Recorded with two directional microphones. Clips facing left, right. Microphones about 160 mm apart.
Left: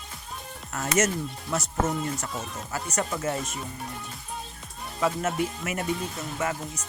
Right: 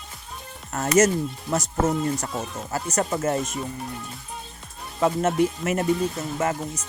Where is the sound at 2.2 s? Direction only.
40° right (ahead or behind).